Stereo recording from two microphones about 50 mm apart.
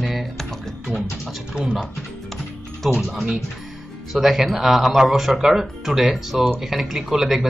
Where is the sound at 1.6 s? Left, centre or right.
Centre.